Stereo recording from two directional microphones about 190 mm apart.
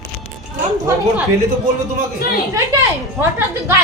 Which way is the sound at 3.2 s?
10° right (ahead or behind).